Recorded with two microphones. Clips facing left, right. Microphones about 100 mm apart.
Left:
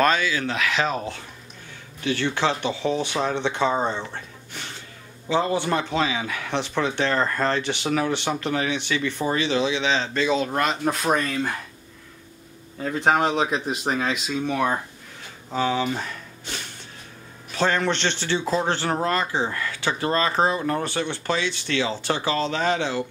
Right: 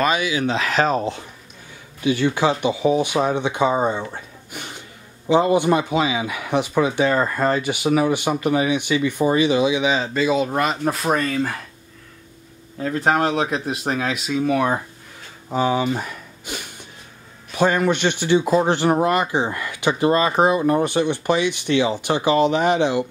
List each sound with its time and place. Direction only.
0.0 s speech: 15° right (ahead or behind)
0.6 s speech: 40° right (ahead or behind)
2.0 s speech: 10° right (ahead or behind)
12.8 s speech: centre (ahead or behind); by 23.0 s 15° right (ahead or behind)